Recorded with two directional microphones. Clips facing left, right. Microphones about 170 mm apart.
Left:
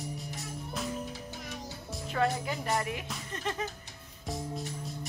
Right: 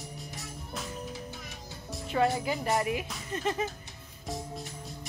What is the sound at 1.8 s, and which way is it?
Music, centre (ahead or behind).